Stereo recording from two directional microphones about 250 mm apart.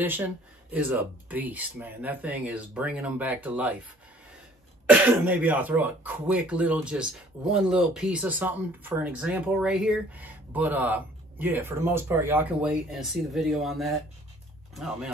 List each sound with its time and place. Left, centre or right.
0.0 s speech: centre
4.9 s speech: centre